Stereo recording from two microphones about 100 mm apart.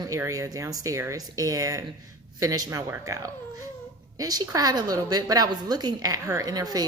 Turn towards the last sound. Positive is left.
turn(degrees=-40)  # may be behind; listen again after turning